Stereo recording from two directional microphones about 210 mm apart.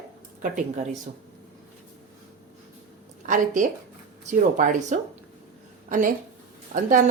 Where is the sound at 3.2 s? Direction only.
35° right (ahead or behind).